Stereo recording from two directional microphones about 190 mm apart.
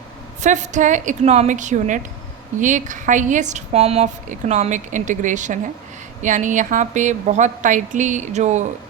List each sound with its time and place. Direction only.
0.4 s a woman's voice: 40° right (ahead or behind)